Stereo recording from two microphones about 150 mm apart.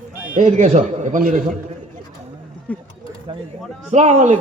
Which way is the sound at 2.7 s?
10° left (ahead or behind).